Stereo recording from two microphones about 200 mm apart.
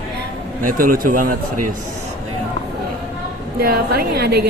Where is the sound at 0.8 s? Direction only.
45° right (ahead or behind).